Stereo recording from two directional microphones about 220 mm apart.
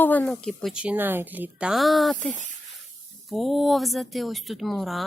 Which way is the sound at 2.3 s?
35° right (ahead or behind).